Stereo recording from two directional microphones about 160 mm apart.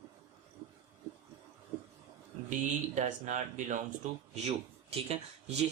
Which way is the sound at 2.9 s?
50° right (ahead or behind).